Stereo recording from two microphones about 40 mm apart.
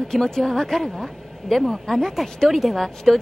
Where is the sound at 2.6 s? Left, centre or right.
Centre.